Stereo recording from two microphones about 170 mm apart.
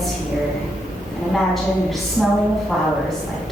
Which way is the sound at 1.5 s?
Centre (ahead or behind).